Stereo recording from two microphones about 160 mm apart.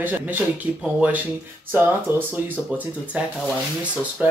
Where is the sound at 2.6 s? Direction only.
10° left (ahead or behind).